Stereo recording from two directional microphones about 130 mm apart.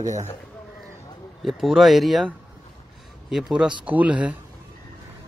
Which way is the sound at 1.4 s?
Centre (ahead or behind).